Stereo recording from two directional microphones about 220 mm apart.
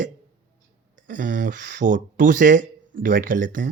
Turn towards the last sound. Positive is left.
turn(degrees=-35)  # may be behind; listen again after turning